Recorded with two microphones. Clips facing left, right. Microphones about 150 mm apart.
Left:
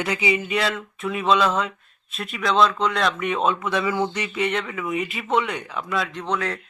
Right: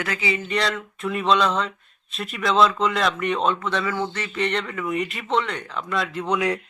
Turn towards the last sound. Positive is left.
turn(degrees=-10)  # may be behind; listen again after turning